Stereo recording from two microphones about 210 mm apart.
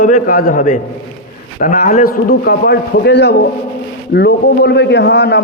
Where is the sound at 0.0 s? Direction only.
40° left (ahead or behind).